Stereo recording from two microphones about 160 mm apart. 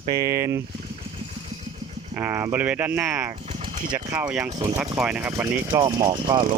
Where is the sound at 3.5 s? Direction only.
55° right (ahead or behind).